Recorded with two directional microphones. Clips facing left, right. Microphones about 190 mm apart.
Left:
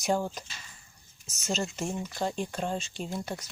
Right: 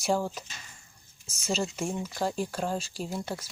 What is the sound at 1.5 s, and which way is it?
Speech, centre (ahead or behind).